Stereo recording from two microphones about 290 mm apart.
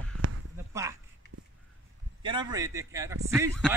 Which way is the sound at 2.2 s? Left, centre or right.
Centre.